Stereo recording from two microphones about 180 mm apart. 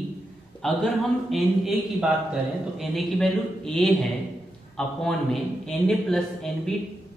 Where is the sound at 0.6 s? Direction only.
Centre (ahead or behind).